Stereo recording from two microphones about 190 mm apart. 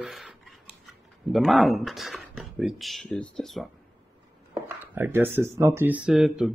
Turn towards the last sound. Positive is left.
turn(degrees=0)  # may be behind; listen again after turning